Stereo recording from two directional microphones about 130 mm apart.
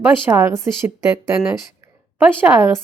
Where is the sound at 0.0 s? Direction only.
20° right (ahead or behind).